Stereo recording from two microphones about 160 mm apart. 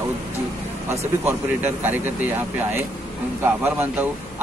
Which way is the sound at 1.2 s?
15° right (ahead or behind).